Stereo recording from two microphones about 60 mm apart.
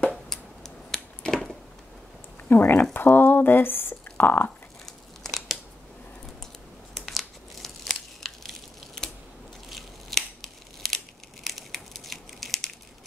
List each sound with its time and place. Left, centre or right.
0.1 s a sound: centre
2.5 s speech: left
4.8 s crumpling: centre
6.9 s crumpling: centre
9.7 s scissors: centre
11.4 s crushing: centre